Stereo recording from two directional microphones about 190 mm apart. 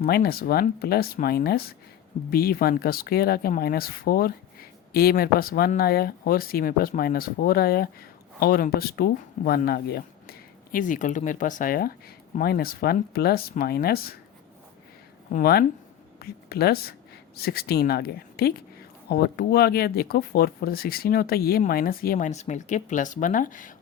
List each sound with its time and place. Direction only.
0.0 s speech: 55° left (ahead or behind)
15.3 s speech: 50° left (ahead or behind)